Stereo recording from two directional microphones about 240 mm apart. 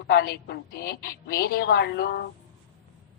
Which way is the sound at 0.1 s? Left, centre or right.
Left.